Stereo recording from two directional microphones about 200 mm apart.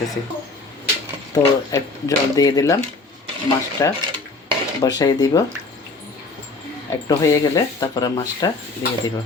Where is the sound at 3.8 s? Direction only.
15° left (ahead or behind).